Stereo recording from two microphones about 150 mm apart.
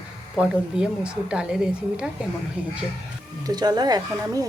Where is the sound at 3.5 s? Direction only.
25° right (ahead or behind).